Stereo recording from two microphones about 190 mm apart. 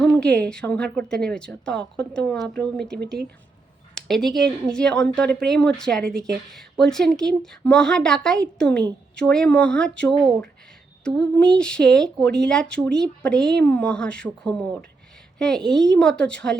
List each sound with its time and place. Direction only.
0.0 s a woman's voice: 5° left (ahead or behind)